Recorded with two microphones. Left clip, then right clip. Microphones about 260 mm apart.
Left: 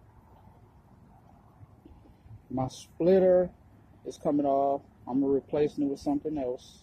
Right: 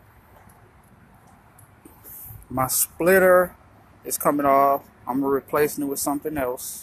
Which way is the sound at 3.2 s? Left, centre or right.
Right.